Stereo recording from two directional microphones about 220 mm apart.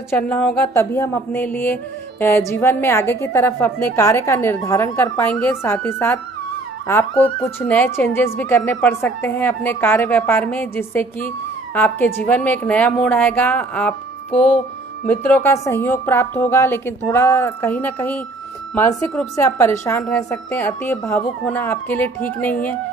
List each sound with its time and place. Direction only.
0.1 s music: 5° left (ahead or behind)
14.3 s music: 25° left (ahead or behind)
15.0 s music: 5° left (ahead or behind)